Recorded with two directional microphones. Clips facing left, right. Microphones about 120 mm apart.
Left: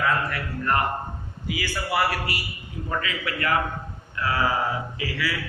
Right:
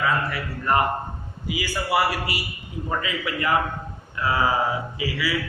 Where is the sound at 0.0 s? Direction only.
10° right (ahead or behind).